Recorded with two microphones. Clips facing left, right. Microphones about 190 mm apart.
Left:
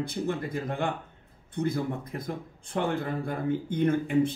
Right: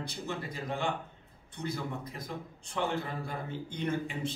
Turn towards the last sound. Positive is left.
turn(degrees=50)  # may be behind; listen again after turning